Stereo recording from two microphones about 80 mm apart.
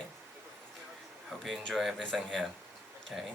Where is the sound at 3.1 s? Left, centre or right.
Centre.